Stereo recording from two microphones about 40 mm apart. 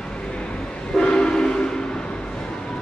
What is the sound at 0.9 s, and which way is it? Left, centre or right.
Train, centre.